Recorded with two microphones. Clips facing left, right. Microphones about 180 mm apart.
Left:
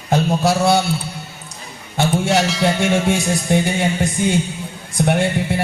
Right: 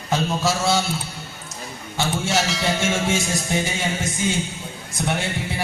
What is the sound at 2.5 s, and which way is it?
Music, centre (ahead or behind).